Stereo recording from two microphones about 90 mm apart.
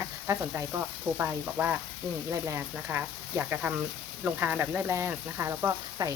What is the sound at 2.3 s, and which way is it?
Speech, 35° right (ahead or behind).